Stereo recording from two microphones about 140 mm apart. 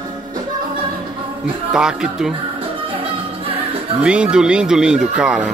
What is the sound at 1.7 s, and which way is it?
Speech, 5° right (ahead or behind).